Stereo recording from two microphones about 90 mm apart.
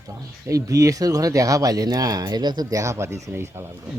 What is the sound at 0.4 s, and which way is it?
Speech, 40° right (ahead or behind).